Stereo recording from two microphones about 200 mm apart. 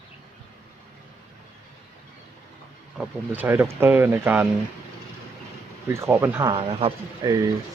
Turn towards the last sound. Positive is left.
turn(degrees=-15)  # may be behind; listen again after turning